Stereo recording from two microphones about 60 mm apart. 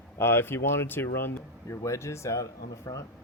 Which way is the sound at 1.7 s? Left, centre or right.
Left.